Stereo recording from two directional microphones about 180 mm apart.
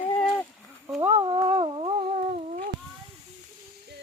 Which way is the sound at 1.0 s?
35° right (ahead or behind).